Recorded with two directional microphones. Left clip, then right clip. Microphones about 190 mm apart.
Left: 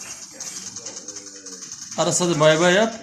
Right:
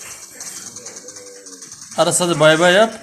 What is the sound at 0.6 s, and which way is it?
Bird, 15° right (ahead or behind).